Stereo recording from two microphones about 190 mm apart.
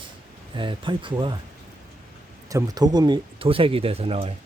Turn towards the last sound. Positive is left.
turn(degrees=-30)  # may be behind; listen again after turning